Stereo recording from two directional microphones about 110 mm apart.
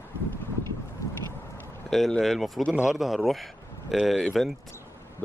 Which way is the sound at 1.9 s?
Centre (ahead or behind).